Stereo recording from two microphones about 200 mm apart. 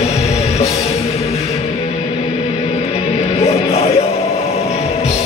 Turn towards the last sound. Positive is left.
turn(degrees=30)  # may be behind; listen again after turning